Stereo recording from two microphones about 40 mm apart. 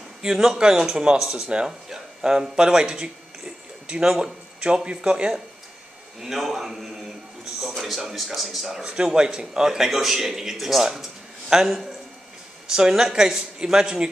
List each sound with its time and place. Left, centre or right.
0.2 s speech: centre
1.2 s speech: centre
1.5 s speech: right
1.9 s a sound: centre
4.2 s speech: right
6.2 s speech: centre
8.8 s speech: right; by 10.9 s centre
11.0 s a sound: centre
12.6 s speech: centre